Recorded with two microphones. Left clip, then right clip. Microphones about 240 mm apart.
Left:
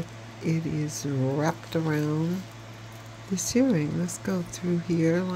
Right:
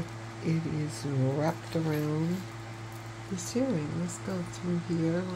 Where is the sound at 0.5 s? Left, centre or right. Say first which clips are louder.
Left 4 dB; centre.